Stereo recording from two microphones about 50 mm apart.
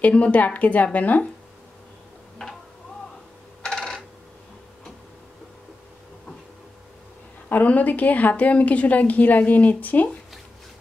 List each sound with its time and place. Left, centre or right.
0.0 s a woman's voice: left
3.6 s coin: centre
7.4 s a woman's voice: left